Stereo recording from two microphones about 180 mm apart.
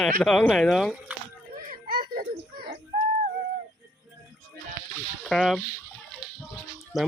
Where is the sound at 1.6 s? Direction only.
50° right (ahead or behind).